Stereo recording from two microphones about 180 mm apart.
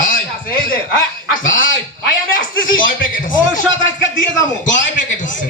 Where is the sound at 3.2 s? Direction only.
45° left (ahead or behind).